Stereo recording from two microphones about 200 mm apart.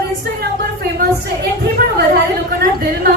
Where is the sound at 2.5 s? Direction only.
50° right (ahead or behind).